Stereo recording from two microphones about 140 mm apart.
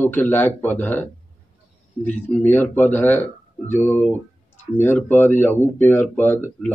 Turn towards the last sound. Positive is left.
turn(degrees=15)  # may be behind; listen again after turning